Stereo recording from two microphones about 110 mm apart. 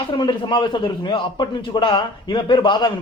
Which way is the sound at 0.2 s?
50° left (ahead or behind).